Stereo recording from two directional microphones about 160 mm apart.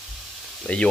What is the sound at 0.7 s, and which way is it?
Speech, 10° left (ahead or behind).